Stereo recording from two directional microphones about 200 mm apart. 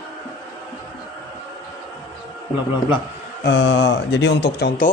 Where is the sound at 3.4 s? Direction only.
65° left (ahead or behind).